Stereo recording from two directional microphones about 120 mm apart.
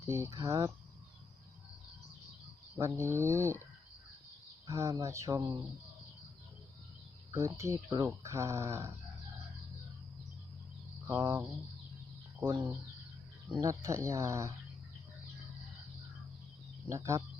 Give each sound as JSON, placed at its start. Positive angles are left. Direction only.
{"t": 0.0, "sound": "speech", "side_deg": -20}
{"t": 2.7, "sound": "speech", "side_deg": -25}
{"t": 4.6, "sound": "speech", "side_deg": -25}
{"t": 7.3, "sound": "speech", "side_deg": -25}
{"t": 11.0, "sound": "a sound", "side_deg": -25}
{"t": 12.4, "sound": "speech", "side_deg": -25}
{"t": 16.9, "sound": "speech", "side_deg": -25}